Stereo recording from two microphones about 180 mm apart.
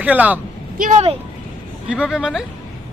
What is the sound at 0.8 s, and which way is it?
Speech, 40° right (ahead or behind).